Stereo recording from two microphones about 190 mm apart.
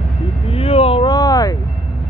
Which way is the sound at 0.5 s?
30° left (ahead or behind).